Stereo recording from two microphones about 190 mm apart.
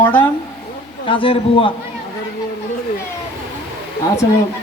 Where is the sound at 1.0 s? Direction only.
30° left (ahead or behind).